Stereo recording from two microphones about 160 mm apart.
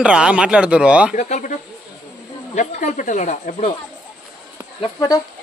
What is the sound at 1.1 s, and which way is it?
Speech, 50° left (ahead or behind).